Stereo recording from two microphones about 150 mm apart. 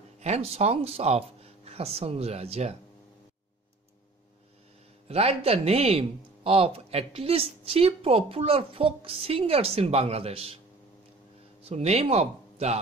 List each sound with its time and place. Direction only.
0.2 s speech: 45° right (ahead or behind)
5.0 s speech: 45° right (ahead or behind)
11.6 s speech: 45° right (ahead or behind)